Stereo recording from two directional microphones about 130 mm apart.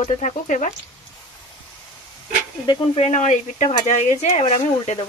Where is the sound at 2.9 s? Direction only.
65° left (ahead or behind).